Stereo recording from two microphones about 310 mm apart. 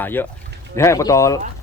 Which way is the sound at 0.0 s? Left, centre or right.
Centre.